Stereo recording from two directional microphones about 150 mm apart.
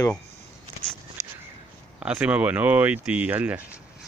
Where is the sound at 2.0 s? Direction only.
10° right (ahead or behind).